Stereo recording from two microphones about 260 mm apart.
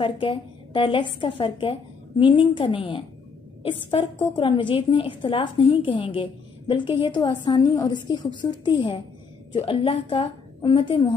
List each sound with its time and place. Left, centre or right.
0.0 s a woman's voice: centre